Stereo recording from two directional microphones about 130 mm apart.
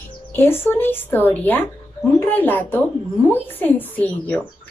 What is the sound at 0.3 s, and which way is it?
Speech, 20° left (ahead or behind).